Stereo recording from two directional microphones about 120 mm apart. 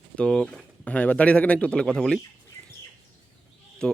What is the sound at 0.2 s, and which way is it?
A man's voice, 5° left (ahead or behind).